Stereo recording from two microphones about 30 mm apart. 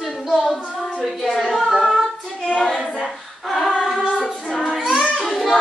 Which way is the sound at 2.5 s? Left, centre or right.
Left.